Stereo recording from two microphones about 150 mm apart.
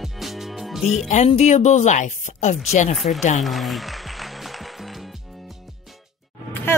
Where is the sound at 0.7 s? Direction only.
Centre (ahead or behind).